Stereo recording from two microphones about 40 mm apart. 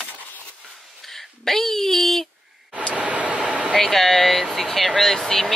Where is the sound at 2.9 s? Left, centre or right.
Right.